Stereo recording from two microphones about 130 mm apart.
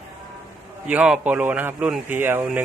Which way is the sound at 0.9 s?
10° right (ahead or behind).